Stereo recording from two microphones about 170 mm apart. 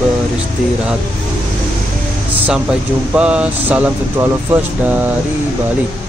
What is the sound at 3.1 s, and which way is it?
Speech, 5° right (ahead or behind).